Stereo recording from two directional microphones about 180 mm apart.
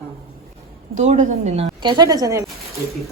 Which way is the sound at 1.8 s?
25° right (ahead or behind).